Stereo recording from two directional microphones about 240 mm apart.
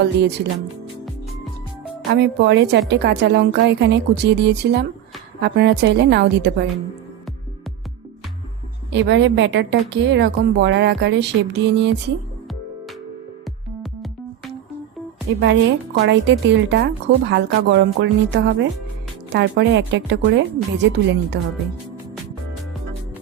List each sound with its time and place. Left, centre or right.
0.0 s a woman's voice: right
2.0 s a woman's voice: right
8.9 s a woman's voice: right
15.3 s a woman's voice: right